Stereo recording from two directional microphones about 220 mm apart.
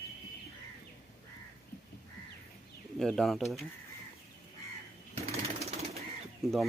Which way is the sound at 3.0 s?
Centre (ahead or behind).